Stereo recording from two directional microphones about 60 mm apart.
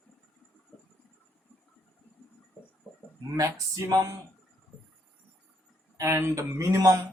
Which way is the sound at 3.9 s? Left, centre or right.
Right.